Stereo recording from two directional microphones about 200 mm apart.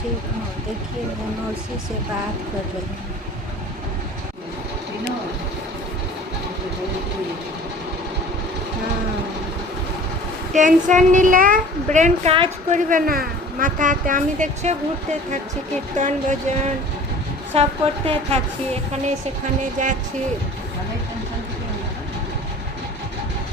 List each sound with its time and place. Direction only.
10.5 s a woman's voice: 40° right (ahead or behind)
12.9 s a woman's voice: 45° right (ahead or behind)
16.0 s a woman's voice: 35° right (ahead or behind)
19.8 s a woman's voice: 40° right (ahead or behind)